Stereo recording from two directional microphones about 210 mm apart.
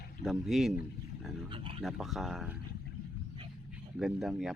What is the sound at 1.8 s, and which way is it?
Speech, centre (ahead or behind).